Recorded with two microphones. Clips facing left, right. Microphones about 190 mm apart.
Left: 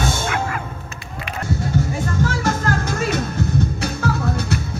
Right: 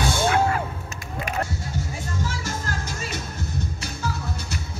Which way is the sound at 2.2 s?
65° left (ahead or behind).